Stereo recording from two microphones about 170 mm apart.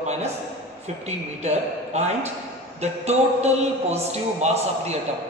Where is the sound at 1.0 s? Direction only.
40° right (ahead or behind).